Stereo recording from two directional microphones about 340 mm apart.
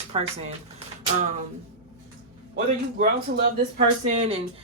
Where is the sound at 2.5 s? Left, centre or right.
Right.